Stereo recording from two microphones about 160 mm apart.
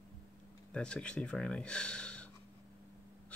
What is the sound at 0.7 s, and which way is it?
Speech, 5° left (ahead or behind).